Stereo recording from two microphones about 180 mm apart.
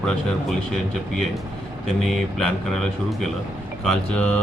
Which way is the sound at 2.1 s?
Centre (ahead or behind).